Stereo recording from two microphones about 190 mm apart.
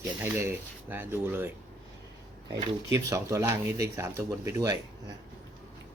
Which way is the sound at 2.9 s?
15° right (ahead or behind).